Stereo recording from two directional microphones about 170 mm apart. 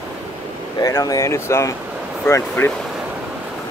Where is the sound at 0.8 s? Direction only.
20° left (ahead or behind).